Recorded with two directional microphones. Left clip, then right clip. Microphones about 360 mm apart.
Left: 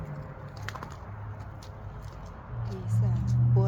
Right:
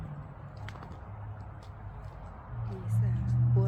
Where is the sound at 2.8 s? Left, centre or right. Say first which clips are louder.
Left 3 dB; centre.